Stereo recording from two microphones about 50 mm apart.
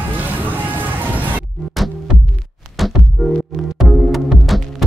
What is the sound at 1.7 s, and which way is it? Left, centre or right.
Music, centre.